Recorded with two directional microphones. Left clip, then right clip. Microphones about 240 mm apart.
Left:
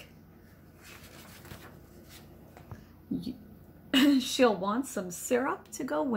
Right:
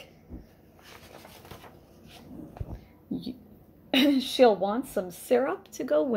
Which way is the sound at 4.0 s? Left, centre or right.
Centre.